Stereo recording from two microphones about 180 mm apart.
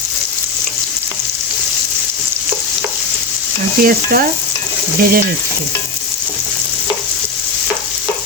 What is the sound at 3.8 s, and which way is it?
Stir, 55° right (ahead or behind).